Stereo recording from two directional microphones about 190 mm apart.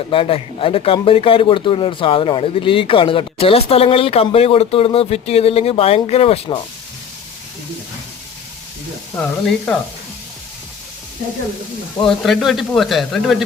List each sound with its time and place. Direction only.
0.1 s speech: 30° left (ahead or behind)
9.1 s speech: 10° left (ahead or behind)
12.0 s speech: centre (ahead or behind)